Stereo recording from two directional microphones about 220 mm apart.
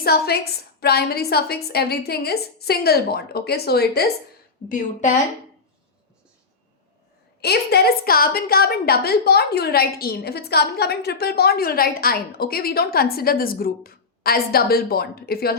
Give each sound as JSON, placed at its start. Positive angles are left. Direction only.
{"t": 0.0, "sound": "a woman's voice", "side_deg": 45}
{"t": 4.7, "sound": "speech", "side_deg": 35}
{"t": 7.4, "sound": "a woman's voice", "side_deg": 45}